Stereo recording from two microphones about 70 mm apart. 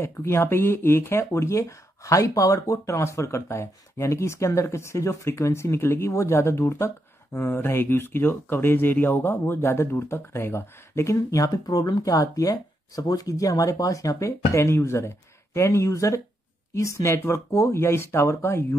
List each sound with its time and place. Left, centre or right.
0.0 s speech: left